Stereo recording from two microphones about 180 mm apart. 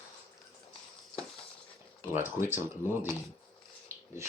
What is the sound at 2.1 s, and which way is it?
Speech, 10° right (ahead or behind).